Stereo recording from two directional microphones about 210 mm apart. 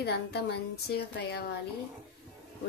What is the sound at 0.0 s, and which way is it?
A woman's voice, 50° left (ahead or behind).